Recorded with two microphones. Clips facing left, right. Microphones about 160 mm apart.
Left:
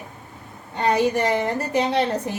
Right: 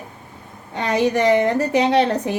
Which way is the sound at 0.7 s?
75° right (ahead or behind).